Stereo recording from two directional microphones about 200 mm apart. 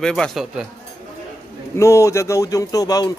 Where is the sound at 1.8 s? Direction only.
15° left (ahead or behind).